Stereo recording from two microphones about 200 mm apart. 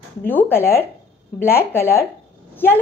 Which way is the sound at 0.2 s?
10° left (ahead or behind).